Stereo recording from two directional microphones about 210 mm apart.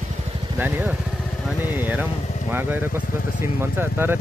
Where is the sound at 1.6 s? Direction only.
10° right (ahead or behind).